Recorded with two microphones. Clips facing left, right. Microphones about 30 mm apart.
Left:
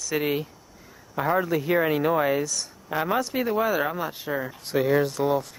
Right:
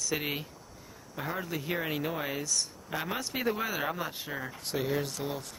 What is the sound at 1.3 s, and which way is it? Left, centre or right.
Speech, left.